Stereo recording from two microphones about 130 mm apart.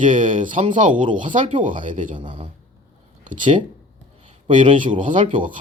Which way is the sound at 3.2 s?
85° right.